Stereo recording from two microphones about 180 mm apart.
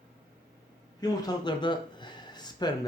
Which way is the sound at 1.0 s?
25° left (ahead or behind).